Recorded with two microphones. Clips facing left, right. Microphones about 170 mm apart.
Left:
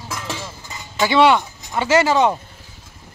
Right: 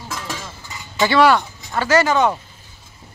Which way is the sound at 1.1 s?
20° left (ahead or behind).